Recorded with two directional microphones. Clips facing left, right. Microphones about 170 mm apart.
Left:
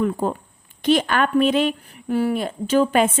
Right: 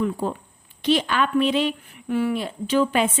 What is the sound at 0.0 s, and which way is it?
A woman's voice, 50° left (ahead or behind).